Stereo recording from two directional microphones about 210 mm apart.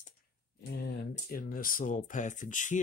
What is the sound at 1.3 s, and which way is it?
Speech, 40° left (ahead or behind).